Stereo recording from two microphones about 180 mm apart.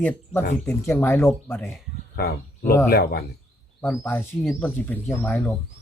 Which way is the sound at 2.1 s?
60° left (ahead or behind).